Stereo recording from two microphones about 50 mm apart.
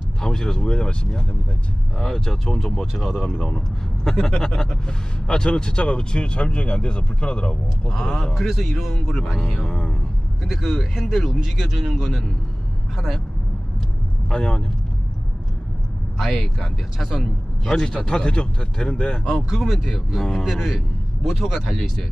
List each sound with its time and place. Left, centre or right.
0.2 s a man's voice: centre
9.7 s speech: centre
10.6 s a man's voice: centre
14.3 s speech: centre
16.2 s a man's voice: centre
19.6 s a man's voice: centre